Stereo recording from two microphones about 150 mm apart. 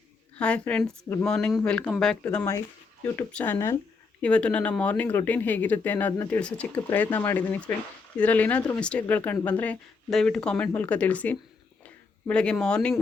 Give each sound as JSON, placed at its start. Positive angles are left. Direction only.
{"t": 0.3, "sound": "speech", "side_deg": 10}
{"t": 2.2, "sound": "speech", "side_deg": 15}